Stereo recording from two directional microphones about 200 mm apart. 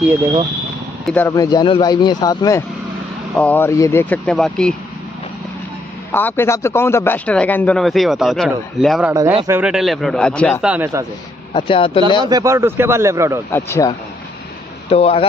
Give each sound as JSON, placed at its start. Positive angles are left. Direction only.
{"t": 1.0, "sound": "a man's voice", "side_deg": 10}
{"t": 6.1, "sound": "a man's voice", "side_deg": 10}
{"t": 10.6, "sound": "a man's voice", "side_deg": -10}
{"t": 11.5, "sound": "speech", "side_deg": 25}
{"t": 12.3, "sound": "a man's voice", "side_deg": -15}
{"t": 13.5, "sound": "a man's voice", "side_deg": 15}
{"t": 14.9, "sound": "speech", "side_deg": 30}